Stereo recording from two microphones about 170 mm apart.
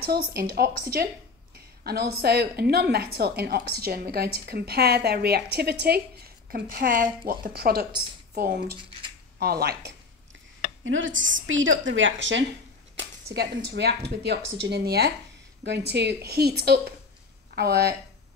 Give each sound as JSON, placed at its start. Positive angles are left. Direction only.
{"t": 0.4, "sound": "a woman's voice", "side_deg": -65}
{"t": 6.5, "sound": "a woman's voice", "side_deg": -60}
{"t": 10.8, "sound": "a woman's voice", "side_deg": -90}
{"t": 12.9, "sound": "a woman's voice", "side_deg": -75}
{"t": 15.6, "sound": "a woman's voice", "side_deg": -85}